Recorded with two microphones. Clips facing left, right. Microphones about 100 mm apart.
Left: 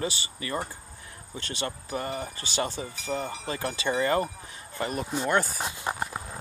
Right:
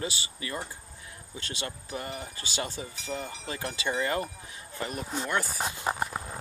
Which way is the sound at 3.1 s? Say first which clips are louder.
Left 5 dB; 50° left (ahead or behind).